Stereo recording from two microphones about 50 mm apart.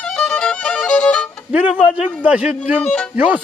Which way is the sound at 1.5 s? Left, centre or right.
Right.